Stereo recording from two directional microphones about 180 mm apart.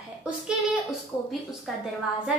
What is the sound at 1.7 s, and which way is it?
Speech, centre (ahead or behind).